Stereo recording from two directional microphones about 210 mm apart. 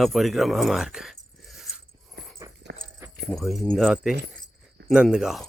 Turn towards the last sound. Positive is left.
turn(degrees=0)  # may be behind; listen again after turning